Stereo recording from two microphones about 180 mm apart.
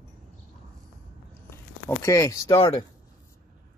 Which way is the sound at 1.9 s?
15° left (ahead or behind).